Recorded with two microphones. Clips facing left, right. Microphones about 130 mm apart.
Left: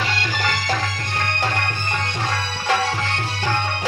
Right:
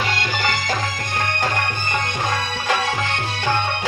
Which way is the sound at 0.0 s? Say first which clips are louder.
Right 1 dB; 35° left (ahead or behind).